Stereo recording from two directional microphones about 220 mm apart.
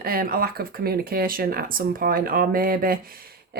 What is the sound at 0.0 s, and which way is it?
Speech, 40° right (ahead or behind).